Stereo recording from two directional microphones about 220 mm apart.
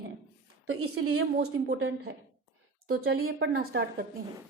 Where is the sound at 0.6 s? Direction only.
75° right (ahead or behind).